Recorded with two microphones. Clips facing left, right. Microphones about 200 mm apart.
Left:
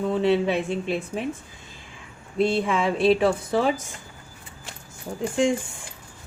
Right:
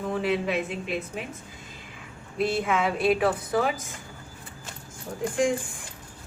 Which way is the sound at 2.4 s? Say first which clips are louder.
Left 3 dB; 30° left (ahead or behind).